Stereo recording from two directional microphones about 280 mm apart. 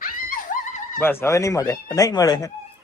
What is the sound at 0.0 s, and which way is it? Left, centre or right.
Dog, left.